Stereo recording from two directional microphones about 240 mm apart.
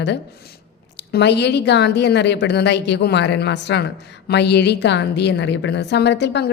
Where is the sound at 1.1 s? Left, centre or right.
Left.